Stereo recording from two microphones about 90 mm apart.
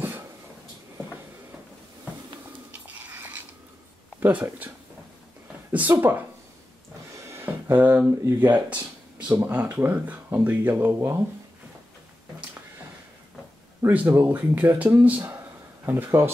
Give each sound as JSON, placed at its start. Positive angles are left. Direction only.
{"t": 4.2, "sound": "speech", "side_deg": -15}
{"t": 7.2, "sound": "speech", "side_deg": -25}
{"t": 13.8, "sound": "speech", "side_deg": -25}